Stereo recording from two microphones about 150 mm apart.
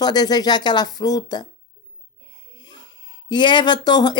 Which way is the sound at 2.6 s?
30° left (ahead or behind).